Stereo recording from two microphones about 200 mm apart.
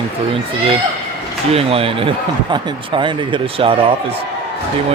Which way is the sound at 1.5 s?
30° right (ahead or behind).